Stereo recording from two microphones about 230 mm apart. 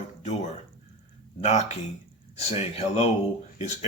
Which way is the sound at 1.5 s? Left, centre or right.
Left.